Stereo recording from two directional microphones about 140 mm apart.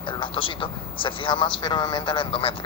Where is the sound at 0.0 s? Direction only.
35° left (ahead or behind).